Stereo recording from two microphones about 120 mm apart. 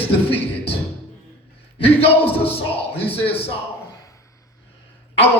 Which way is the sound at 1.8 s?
55° left (ahead or behind).